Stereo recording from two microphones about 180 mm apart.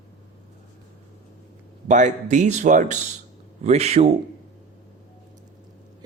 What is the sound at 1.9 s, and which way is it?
A man's voice, 40° right (ahead or behind).